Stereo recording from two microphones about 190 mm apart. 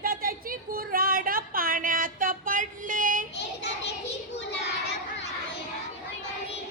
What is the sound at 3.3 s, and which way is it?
Child singing, 65° left (ahead or behind).